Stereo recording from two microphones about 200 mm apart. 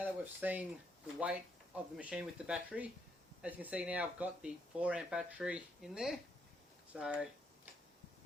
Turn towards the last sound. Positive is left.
turn(degrees=-5)  # may be behind; listen again after turning